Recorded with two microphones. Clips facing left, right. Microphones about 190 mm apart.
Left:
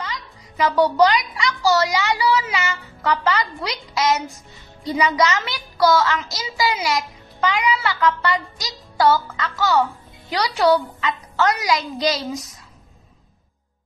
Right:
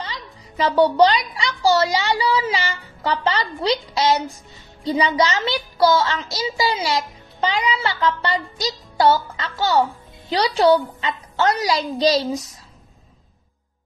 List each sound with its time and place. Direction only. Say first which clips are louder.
0.0 s a child's voice: left 1 dB; 30° right (ahead or behind)